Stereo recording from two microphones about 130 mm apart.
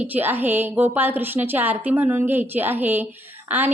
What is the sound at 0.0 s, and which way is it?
A woman's voice, 15° right (ahead or behind).